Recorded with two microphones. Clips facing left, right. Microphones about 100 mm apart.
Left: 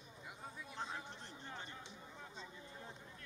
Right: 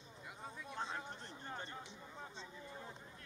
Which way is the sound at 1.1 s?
40° right (ahead or behind).